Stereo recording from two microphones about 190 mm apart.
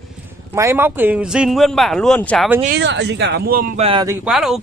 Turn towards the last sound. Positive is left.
turn(degrees=-5)  # may be behind; listen again after turning